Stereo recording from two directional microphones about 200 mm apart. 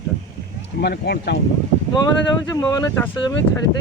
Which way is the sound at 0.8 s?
50° left (ahead or behind).